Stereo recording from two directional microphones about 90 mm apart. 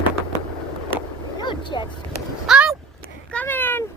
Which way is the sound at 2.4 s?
5° right (ahead or behind).